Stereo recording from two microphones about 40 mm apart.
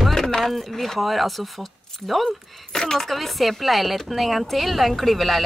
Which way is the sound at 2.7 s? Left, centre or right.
Centre.